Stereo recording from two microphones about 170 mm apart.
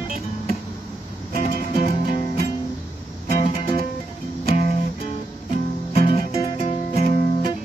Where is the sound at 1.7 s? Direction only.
35° left (ahead or behind).